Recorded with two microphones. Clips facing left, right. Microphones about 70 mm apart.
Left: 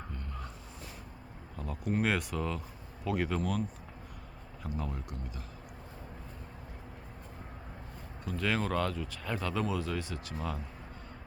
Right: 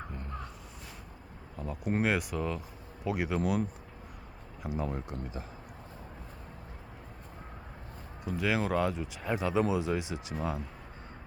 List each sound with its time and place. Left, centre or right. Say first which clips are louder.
1.5 s speech: right 1 dB; centre
4.8 s speech: right 6 dB; right
8.4 s speech: right 2 dB; centre